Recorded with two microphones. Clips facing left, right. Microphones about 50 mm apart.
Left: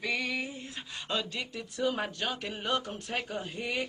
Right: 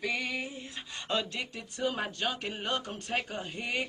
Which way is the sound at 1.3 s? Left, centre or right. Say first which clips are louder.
Even; right.